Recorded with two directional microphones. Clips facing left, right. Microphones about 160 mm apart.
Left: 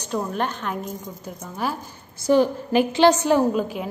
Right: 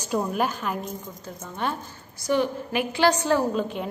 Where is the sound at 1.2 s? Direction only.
10° left (ahead or behind).